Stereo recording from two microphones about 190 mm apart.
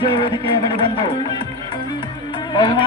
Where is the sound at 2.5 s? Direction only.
25° left (ahead or behind).